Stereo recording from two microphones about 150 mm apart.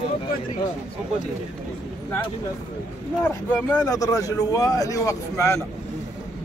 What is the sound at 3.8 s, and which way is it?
Speech, 25° left (ahead or behind).